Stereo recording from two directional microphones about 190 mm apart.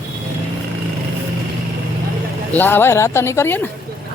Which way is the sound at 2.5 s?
10° left (ahead or behind).